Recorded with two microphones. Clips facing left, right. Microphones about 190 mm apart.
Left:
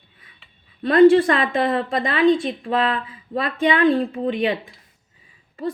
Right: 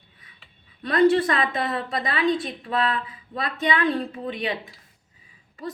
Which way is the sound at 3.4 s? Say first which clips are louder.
Left 6 dB; 30° left (ahead or behind).